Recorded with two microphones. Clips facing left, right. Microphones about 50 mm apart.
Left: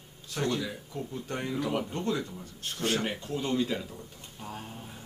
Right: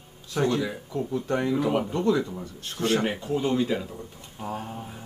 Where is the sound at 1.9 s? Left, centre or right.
Right.